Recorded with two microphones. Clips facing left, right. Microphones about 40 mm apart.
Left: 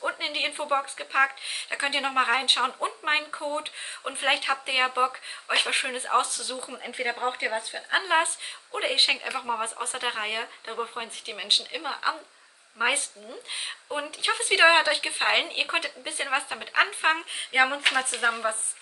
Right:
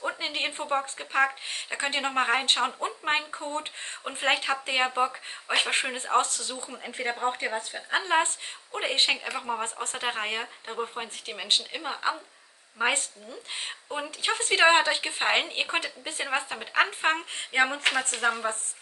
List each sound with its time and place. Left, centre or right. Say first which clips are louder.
0.0 s speech: left 1 dB; centre